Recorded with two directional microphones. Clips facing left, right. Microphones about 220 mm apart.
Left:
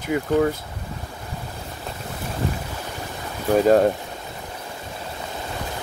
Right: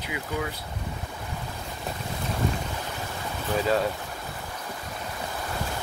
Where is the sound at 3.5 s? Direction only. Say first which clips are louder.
Left 9 dB; 45° left (ahead or behind).